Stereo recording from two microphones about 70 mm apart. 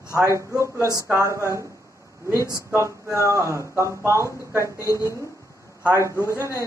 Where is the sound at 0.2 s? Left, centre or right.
Right.